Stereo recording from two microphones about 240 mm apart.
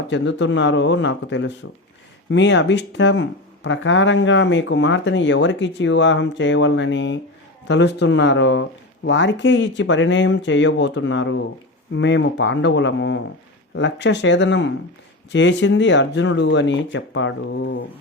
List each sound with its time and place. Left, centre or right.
0.1 s speech: left